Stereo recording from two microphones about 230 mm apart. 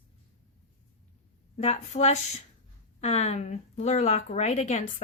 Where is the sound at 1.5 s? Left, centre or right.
Left.